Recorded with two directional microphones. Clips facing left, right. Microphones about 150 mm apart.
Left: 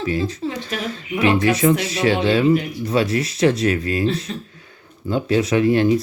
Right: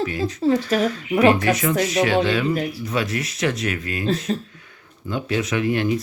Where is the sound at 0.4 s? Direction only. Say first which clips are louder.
Right 8 dB; 40° right (ahead or behind).